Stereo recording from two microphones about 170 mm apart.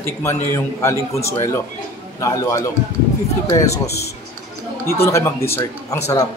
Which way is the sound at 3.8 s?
70° left (ahead or behind).